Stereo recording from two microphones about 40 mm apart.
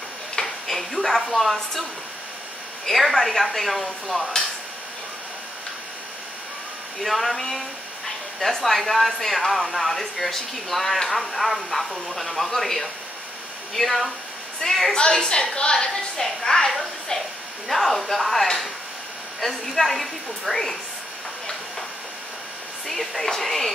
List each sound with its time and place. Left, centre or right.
0.4 s speech: centre
7.0 s a woman's voice: centre
15.0 s a woman's voice: left
15.9 s a woman's voice: centre
17.6 s speech: centre
22.8 s speech: centre